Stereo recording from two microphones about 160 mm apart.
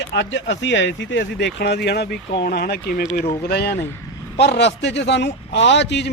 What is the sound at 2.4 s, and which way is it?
A man's voice, 75° left (ahead or behind).